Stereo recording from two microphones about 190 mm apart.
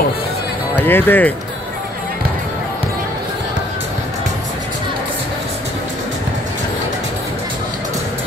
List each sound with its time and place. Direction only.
0.7 s speech: 10° left (ahead or behind)